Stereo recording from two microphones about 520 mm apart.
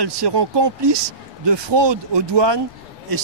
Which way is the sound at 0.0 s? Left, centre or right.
Right.